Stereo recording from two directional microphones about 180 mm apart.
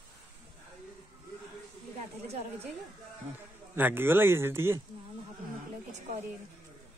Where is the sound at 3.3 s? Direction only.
10° right (ahead or behind).